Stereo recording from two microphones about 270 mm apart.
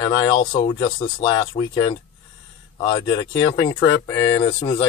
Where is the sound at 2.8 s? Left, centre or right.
Centre.